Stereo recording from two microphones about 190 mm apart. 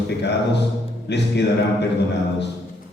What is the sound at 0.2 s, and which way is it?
A man's voice, 65° left (ahead or behind).